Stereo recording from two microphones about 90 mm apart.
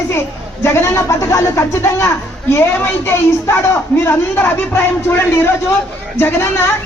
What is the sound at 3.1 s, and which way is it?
A woman's voice, 30° left (ahead or behind).